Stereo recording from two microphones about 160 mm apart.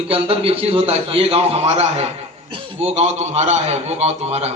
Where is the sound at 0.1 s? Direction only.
35° right (ahead or behind).